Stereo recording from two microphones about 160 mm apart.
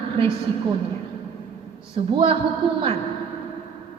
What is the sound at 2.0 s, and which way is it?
Speech, 35° right (ahead or behind).